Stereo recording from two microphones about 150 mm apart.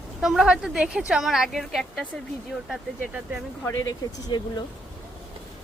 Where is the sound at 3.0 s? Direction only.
10° right (ahead or behind).